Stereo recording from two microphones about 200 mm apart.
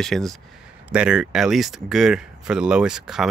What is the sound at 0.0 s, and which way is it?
Speech, centre (ahead or behind).